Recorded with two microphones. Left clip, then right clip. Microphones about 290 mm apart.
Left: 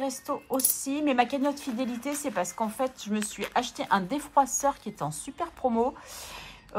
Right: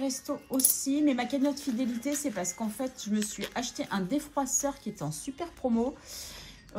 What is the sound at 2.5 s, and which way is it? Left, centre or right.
Speech, left.